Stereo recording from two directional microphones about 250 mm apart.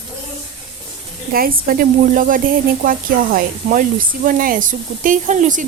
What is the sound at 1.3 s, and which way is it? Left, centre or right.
Speech, right.